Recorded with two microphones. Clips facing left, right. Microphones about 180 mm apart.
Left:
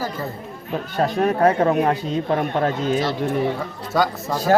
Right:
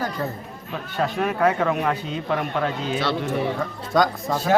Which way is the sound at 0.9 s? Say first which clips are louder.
Left 4 dB; 40° left (ahead or behind).